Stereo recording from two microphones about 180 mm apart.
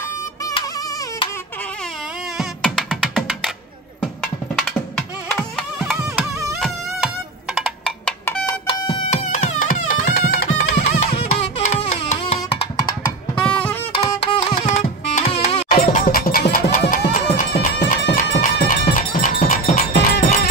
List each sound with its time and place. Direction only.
0.5 s a sound: 25° left (ahead or behind)
2.3 s music: centre (ahead or behind)
4.6 s music: 5° left (ahead or behind)
5.9 s music: 15° right (ahead or behind)
7.5 s music: centre (ahead or behind)
8.5 s music: 30° left (ahead or behind)
9.1 s music: 45° left (ahead or behind)
10.8 s music: 35° left (ahead or behind)
13.3 s music: 10° left (ahead or behind)
14.0 s music: 20° left (ahead or behind)
14.6 s music: 30° left (ahead or behind)
15.7 s music: 55° left (ahead or behind)
17.4 s bagpipes: 60° left (ahead or behind)
18.6 s music: 50° left (ahead or behind)